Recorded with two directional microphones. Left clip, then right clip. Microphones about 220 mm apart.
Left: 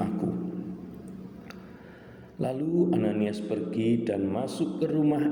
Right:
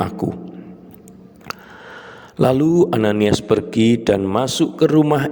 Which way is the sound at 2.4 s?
50° right (ahead or behind).